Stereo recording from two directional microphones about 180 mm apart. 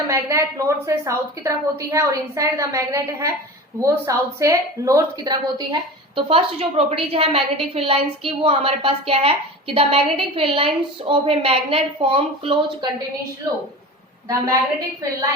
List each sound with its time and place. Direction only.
0.1 s a woman's voice: 15° right (ahead or behind)
14.3 s a woman's voice: 20° right (ahead or behind)